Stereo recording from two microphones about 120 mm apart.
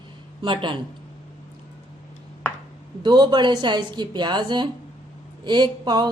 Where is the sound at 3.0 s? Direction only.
40° right (ahead or behind).